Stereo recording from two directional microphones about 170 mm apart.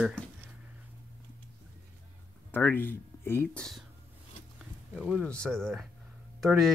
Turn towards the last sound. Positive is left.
turn(degrees=0)  # may be behind; listen again after turning